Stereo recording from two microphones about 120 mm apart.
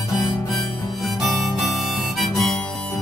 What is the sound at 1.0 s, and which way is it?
Harmonica, centre (ahead or behind).